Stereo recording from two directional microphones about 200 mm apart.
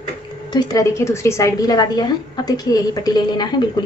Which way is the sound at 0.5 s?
20° left (ahead or behind).